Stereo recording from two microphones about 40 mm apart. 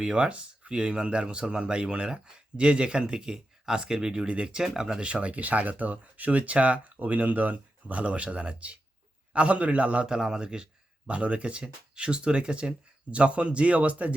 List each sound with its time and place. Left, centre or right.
0.0 s speech: right
4.6 s speech: centre
4.9 s speech: right
10.1 s speech: centre
11.1 s speech: right